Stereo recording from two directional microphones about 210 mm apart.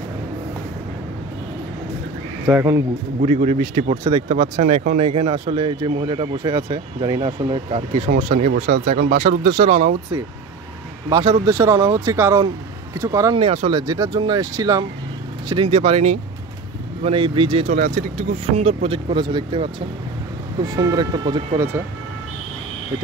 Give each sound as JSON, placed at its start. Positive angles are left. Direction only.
{"t": 2.4, "sound": "speech", "side_deg": -15}
{"t": 3.2, "sound": "speech", "side_deg": -30}
{"t": 8.1, "sound": "speech", "side_deg": -40}
{"t": 11.1, "sound": "speech", "side_deg": -20}
{"t": 17.7, "sound": "speech", "side_deg": -40}